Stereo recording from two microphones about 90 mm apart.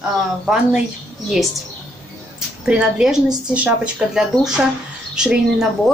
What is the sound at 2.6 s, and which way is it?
A woman's voice, 10° right (ahead or behind).